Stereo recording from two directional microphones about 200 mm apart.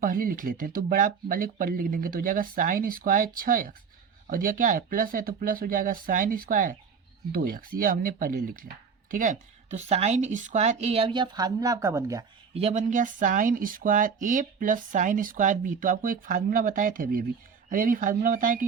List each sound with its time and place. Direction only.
0.0 s speech: 45° right (ahead or behind); by 12.2 s 15° right (ahead or behind)
12.5 s speech: 35° right (ahead or behind)